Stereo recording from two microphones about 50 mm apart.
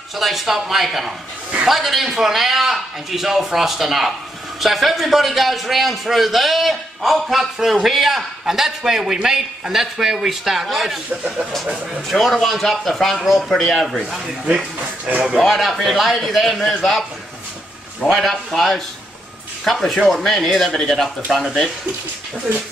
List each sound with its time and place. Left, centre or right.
0.2 s a man's voice: centre
12.1 s a man's voice: centre
14.4 s speech: right
15.4 s a man's voice: centre
18.1 s a man's voice: centre